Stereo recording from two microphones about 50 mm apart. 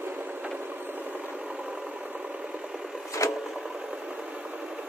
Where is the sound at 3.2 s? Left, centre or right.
Left.